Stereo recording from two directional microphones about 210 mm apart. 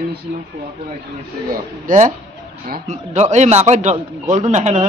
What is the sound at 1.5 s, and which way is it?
Speech, 35° right (ahead or behind).